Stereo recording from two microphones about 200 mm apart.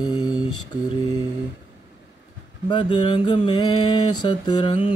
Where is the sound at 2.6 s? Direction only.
25° left (ahead or behind).